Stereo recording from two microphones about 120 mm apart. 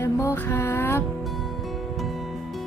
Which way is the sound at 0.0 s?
25° left (ahead or behind).